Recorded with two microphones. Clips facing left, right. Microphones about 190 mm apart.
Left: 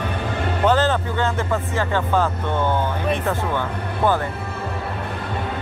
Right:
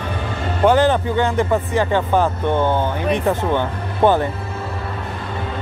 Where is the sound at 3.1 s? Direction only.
20° right (ahead or behind).